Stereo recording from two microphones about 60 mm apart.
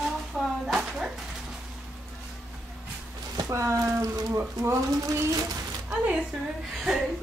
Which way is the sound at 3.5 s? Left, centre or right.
Right.